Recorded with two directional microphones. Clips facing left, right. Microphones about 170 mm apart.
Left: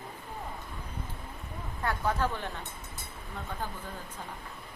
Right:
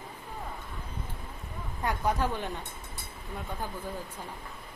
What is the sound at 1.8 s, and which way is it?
Speech, 15° right (ahead or behind).